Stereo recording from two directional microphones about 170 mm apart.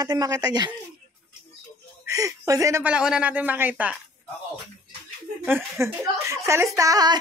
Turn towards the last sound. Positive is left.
turn(degrees=-25)  # may be behind; listen again after turning